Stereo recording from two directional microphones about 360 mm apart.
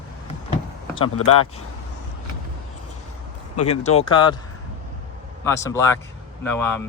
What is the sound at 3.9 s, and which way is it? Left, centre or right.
Speech, centre.